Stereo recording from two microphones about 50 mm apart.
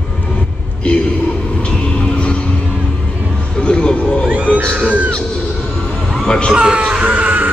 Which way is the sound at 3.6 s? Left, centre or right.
Centre.